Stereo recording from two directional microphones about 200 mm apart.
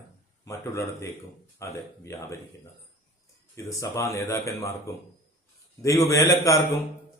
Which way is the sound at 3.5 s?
15° left (ahead or behind).